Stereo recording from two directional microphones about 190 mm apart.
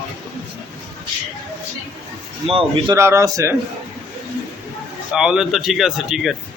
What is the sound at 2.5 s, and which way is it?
Speech, 20° right (ahead or behind).